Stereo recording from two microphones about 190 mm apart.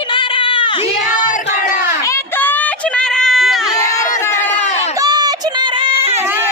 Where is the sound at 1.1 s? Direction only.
45° left (ahead or behind).